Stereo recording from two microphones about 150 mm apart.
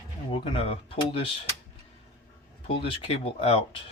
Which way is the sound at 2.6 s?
40° left (ahead or behind).